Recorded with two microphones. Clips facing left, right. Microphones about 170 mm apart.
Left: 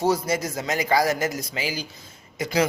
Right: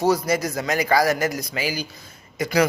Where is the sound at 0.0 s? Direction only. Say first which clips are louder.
Right 2 dB; 25° left (ahead or behind).